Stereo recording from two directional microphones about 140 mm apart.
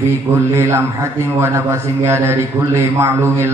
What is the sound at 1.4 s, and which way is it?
Mantra, 15° right (ahead or behind).